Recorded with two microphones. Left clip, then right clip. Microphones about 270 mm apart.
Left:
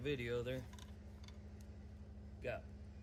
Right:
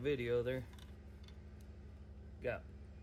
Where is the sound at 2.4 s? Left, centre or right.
Right.